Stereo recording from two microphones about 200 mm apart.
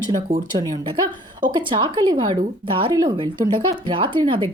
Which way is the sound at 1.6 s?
25° right (ahead or behind).